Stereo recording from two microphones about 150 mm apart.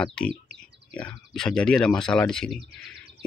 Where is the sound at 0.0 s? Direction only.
5° left (ahead or behind).